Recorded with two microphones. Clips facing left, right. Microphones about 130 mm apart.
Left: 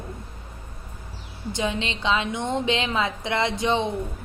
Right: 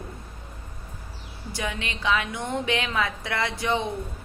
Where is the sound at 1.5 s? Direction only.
20° left (ahead or behind).